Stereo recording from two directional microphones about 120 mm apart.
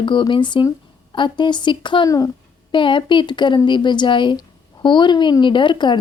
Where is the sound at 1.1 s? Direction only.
40° left (ahead or behind).